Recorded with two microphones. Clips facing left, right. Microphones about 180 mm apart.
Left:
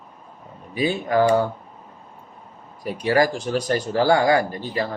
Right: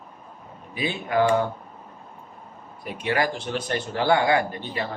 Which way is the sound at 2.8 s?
40° left (ahead or behind).